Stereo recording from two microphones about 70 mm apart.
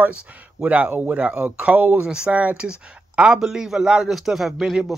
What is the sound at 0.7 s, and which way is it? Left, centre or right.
A man's voice, right.